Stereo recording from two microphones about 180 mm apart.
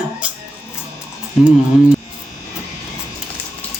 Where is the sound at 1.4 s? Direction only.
5° right (ahead or behind).